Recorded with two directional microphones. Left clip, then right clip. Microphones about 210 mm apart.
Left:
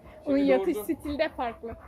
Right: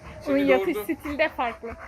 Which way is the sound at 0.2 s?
Centre (ahead or behind).